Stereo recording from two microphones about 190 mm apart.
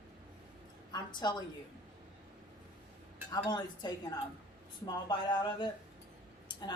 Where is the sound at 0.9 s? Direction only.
20° left (ahead or behind).